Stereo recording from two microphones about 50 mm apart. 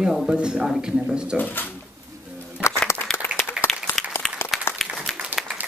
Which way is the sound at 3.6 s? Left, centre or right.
Left.